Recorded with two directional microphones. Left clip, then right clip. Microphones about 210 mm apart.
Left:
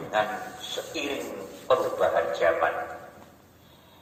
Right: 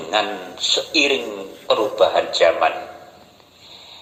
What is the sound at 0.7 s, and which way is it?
A man's voice, 50° right (ahead or behind).